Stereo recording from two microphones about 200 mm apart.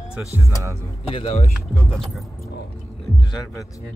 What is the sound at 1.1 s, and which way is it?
Speech, 30° left (ahead or behind).